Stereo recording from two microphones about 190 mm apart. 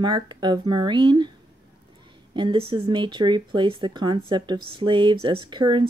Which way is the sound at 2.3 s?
25° right (ahead or behind).